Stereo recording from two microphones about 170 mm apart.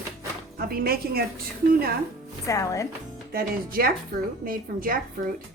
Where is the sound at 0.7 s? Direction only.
60° right (ahead or behind).